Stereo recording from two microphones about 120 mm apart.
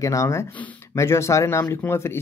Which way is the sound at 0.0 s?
25° left (ahead or behind).